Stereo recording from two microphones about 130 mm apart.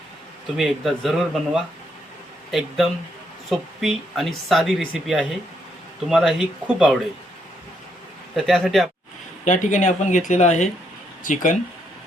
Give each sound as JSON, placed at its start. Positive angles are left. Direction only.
{"t": 0.5, "sound": "speech", "side_deg": 0}
{"t": 8.4, "sound": "speech", "side_deg": 0}
{"t": 9.4, "sound": "speech", "side_deg": 75}
{"t": 11.2, "sound": "speech", "side_deg": 90}